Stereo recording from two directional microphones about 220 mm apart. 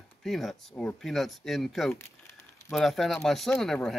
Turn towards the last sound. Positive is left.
turn(degrees=0)  # may be behind; listen again after turning